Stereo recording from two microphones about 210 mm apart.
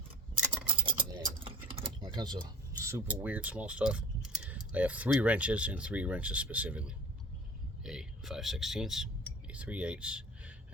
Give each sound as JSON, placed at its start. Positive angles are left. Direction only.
{"t": 0.7, "sound": "typing", "side_deg": -25}
{"t": 2.8, "sound": "speech", "side_deg": -10}
{"t": 7.9, "sound": "a sound", "side_deg": 0}